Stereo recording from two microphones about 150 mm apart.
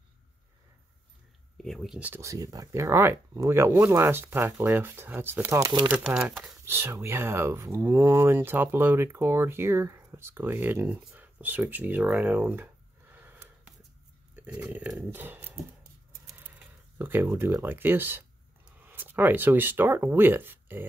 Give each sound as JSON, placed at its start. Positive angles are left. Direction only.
{"t": 1.6, "sound": "speech", "side_deg": 0}
{"t": 6.0, "sound": "speech", "side_deg": -5}
{"t": 6.6, "sound": "speech", "side_deg": -15}
{"t": 13.1, "sound": "a sound", "side_deg": -10}
{"t": 14.3, "sound": "speech", "side_deg": -10}